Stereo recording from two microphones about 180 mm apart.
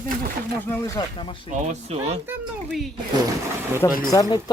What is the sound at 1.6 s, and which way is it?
Speech, 35° right (ahead or behind).